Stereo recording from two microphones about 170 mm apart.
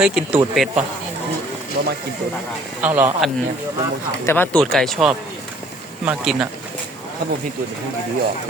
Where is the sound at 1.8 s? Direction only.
90° right.